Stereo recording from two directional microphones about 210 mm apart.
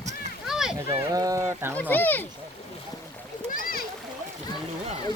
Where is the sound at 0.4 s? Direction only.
Centre (ahead or behind).